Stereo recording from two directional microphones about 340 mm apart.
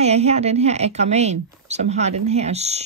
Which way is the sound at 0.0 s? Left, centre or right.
Centre.